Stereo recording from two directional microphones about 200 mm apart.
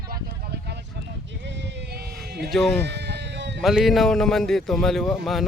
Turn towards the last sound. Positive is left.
turn(degrees=0)  # may be behind; listen again after turning